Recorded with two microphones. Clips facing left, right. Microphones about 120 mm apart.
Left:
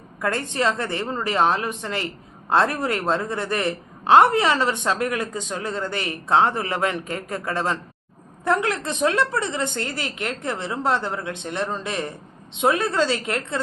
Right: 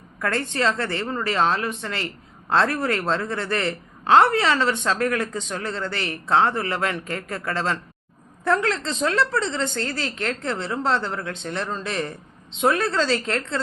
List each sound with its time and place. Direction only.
0.2 s a woman's voice: 15° left (ahead or behind)